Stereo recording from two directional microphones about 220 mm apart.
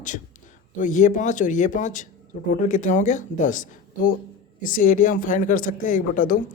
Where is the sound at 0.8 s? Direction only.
35° left (ahead or behind).